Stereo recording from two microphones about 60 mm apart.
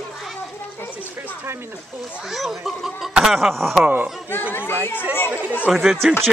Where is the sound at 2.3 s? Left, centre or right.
Centre.